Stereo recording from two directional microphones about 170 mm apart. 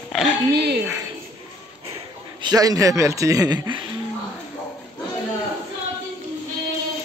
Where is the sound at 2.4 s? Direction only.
20° right (ahead or behind).